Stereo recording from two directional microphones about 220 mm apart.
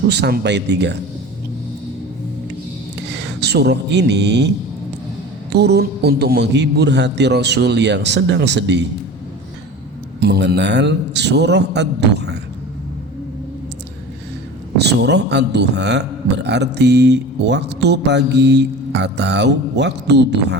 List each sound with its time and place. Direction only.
0.1 s a man's voice: 50° right (ahead or behind)
3.4 s a man's voice: 50° right (ahead or behind)
10.2 s a man's voice: 45° right (ahead or behind)
14.8 s a man's voice: 50° right (ahead or behind)